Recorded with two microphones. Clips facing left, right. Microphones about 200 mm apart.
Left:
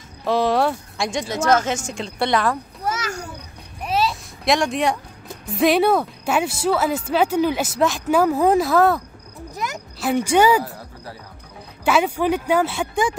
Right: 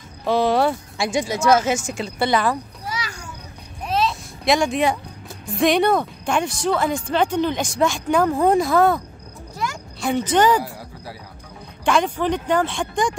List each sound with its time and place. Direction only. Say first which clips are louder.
0.2 s a woman's voice: right 1 dB; centre (ahead or behind)
2.8 s children playing: left 5 dB; 45° left (ahead or behind)
3.8 s a sound: even; 5° left (ahead or behind)
5.5 s a woman's voice: left 1 dB; 5° left (ahead or behind)
9.6 s a sound: right 1 dB; 20° left (ahead or behind)
9.9 s speech: left 2 dB; 5° left (ahead or behind)
11.8 s speech: left 1 dB; 5° left (ahead or behind)